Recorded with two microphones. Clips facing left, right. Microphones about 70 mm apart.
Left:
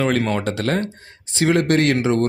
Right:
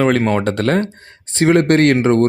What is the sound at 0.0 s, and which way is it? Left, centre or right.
Speech, right.